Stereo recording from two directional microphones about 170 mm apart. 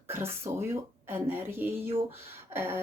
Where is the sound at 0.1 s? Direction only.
15° right (ahead or behind).